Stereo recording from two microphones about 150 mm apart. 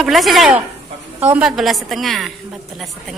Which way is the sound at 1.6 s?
Centre (ahead or behind).